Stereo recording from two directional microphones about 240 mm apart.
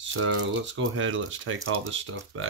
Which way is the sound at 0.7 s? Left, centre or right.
Right.